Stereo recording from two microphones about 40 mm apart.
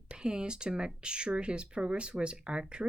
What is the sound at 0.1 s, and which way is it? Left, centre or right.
A woman's voice, right.